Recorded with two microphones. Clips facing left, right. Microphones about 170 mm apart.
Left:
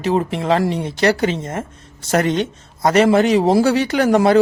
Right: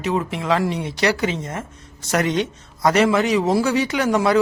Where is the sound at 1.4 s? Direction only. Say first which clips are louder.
Left 4 dB; 50° left (ahead or behind).